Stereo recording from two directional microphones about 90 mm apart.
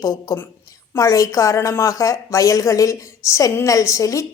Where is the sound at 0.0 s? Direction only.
35° left (ahead or behind).